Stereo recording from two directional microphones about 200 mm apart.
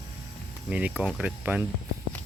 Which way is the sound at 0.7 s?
5° right (ahead or behind).